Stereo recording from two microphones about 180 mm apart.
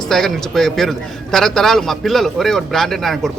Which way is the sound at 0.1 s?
Centre (ahead or behind).